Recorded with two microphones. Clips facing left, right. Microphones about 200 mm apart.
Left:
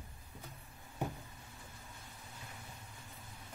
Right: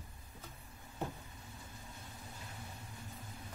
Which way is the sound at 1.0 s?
15° left (ahead or behind).